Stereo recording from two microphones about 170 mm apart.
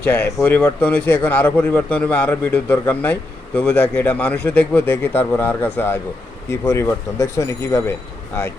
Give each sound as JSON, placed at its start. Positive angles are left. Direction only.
{"t": 0.0, "sound": "a man's voice", "side_deg": 10}